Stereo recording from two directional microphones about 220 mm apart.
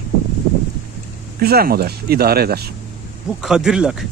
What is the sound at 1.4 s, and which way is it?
Speech, 45° right (ahead or behind).